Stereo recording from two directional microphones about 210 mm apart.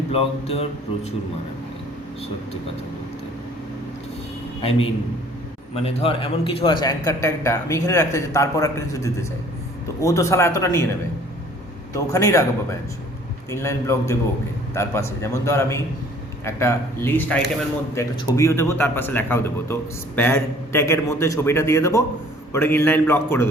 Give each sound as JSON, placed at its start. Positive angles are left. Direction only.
{"t": 0.1, "sound": "speech", "side_deg": 25}
{"t": 5.7, "sound": "speech", "side_deg": 30}
{"t": 11.9, "sound": "speech", "side_deg": 15}
{"t": 13.5, "sound": "speech", "side_deg": 10}